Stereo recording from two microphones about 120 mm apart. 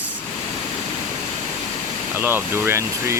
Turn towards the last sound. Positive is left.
turn(degrees=-25)  # may be behind; listen again after turning